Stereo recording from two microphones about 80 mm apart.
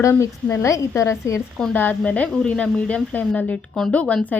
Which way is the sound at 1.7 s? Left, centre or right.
Left.